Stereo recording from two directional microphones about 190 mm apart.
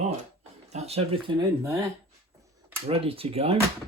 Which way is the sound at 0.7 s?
35° right (ahead or behind).